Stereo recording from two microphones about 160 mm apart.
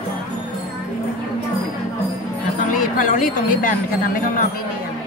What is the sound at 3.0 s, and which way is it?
Speech, 55° left (ahead or behind).